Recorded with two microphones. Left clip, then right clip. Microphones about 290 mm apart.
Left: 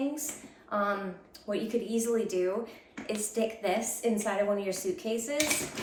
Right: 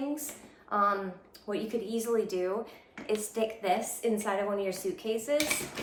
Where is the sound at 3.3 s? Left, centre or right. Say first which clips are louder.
Left 1 dB; centre.